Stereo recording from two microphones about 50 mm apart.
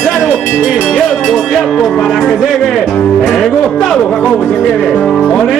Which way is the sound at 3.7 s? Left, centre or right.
Centre.